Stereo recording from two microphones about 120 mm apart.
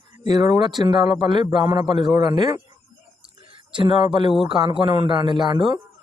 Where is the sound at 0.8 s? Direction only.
40° right (ahead or behind).